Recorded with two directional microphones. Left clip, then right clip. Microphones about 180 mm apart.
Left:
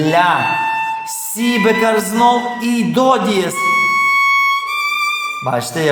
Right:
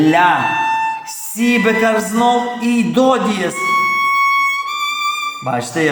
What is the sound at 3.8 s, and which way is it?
Music, 25° right (ahead or behind).